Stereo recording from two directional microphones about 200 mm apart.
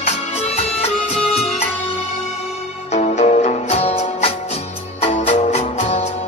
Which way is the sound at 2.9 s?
35° left (ahead or behind).